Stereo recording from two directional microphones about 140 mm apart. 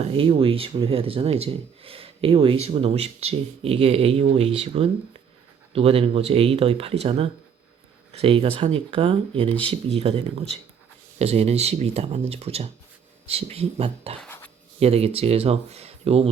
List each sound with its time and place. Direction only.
0.0 s speech: 40° right (ahead or behind)
14.3 s a sound: 15° left (ahead or behind)
14.8 s speech: 45° right (ahead or behind)